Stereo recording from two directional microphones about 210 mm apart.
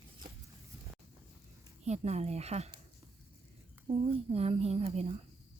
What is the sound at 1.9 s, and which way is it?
Speech, 30° right (ahead or behind).